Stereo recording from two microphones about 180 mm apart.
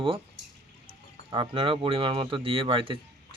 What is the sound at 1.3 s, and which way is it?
Speech, 30° right (ahead or behind).